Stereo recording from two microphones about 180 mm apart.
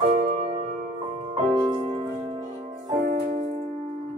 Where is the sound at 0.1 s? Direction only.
30° right (ahead or behind).